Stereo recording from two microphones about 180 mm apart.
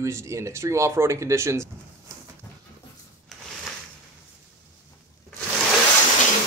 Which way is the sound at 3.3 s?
Centre (ahead or behind).